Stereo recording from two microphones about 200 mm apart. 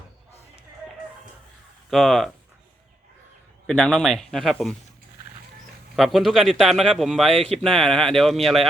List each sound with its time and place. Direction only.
1.9 s a man's voice: centre (ahead or behind)
3.7 s a man's voice: 5° left (ahead or behind)
6.0 s a man's voice: centre (ahead or behind)